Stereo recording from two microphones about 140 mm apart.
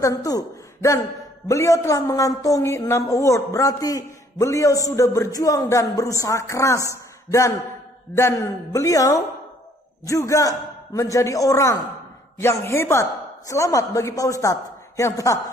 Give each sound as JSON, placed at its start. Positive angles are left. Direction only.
{"t": 0.0, "sound": "speech", "side_deg": 25}